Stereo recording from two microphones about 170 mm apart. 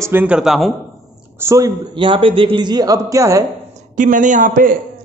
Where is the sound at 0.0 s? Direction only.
10° right (ahead or behind).